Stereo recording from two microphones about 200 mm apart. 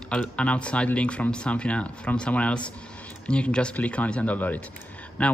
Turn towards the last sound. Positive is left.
turn(degrees=5)  # may be behind; listen again after turning